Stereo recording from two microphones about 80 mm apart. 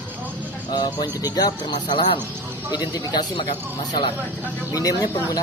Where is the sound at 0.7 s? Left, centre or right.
Left.